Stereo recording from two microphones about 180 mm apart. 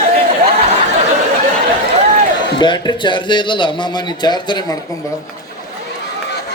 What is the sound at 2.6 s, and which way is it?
A woman's voice, 25° left (ahead or behind).